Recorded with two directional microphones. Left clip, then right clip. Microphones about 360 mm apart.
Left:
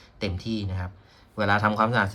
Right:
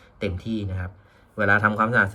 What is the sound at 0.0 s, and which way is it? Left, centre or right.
Speech, centre.